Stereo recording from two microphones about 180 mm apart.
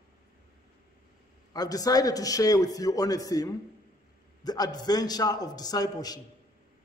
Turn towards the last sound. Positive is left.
turn(degrees=20)  # may be behind; listen again after turning